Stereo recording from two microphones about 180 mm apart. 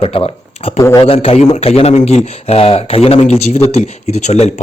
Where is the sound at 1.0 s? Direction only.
30° left (ahead or behind).